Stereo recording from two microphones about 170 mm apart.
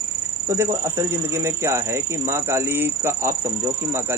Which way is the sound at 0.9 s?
15° right (ahead or behind).